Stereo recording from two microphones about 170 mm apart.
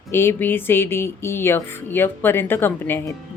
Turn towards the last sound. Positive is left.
turn(degrees=10)  # may be behind; listen again after turning